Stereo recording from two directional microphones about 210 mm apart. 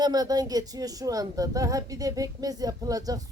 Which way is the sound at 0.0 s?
20° right (ahead or behind).